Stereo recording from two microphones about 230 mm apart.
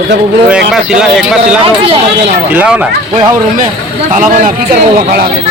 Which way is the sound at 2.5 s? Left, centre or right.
Centre.